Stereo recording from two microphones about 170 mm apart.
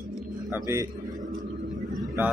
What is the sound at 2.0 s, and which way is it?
Vehicle, 10° right (ahead or behind).